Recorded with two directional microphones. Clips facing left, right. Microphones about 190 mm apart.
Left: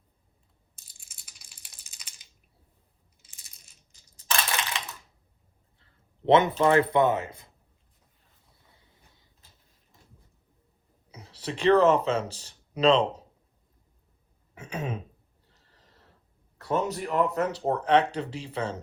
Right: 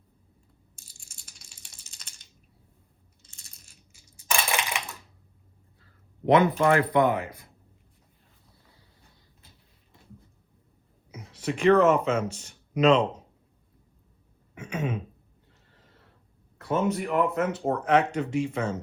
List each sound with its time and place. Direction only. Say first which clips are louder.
0.9 s rattle: right 2 dB; 5° left (ahead or behind)
3.9 s crushing: right 1 dB; 10° right (ahead or behind)
5.8 s a sound: even; 25° left (ahead or behind)
6.7 s speech: even; 25° left (ahead or behind)
11.1 s speech: right 4 dB; 35° left (ahead or behind)
14.5 s throat clearing: right 3 dB; 35° left (ahead or behind)
15.4 s a sound: right 1 dB; 35° left (ahead or behind)
16.6 s speech: right 2 dB; 35° left (ahead or behind)